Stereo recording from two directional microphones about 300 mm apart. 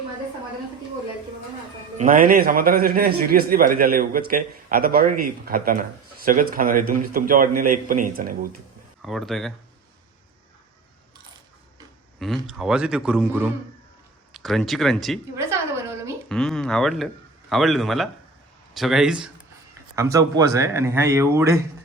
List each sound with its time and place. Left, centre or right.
2.0 s a man's voice: right
9.0 s speech: centre
12.2 s a man's voice: centre
14.3 s a sound: centre
16.3 s a man's voice: centre